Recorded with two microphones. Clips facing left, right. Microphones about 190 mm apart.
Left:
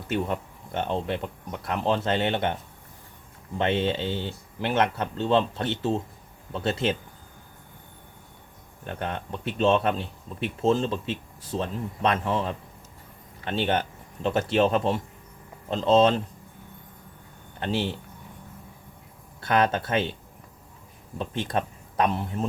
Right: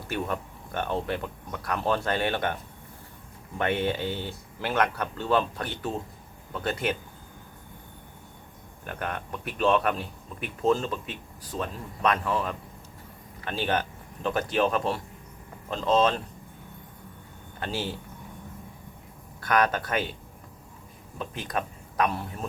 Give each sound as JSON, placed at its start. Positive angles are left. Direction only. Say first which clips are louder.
{"t": 0.1, "sound": "speech", "louder": "left 3 dB", "side_deg": 20}
{"t": 3.6, "sound": "speech", "louder": "left 2 dB", "side_deg": 25}
{"t": 8.9, "sound": "speech", "louder": "left 2 dB", "side_deg": 25}
{"t": 17.6, "sound": "speech", "louder": "left 5 dB", "side_deg": 25}
{"t": 19.4, "sound": "speech", "louder": "left 1 dB", "side_deg": 25}
{"t": 21.2, "sound": "speech", "louder": "left 4 dB", "side_deg": 30}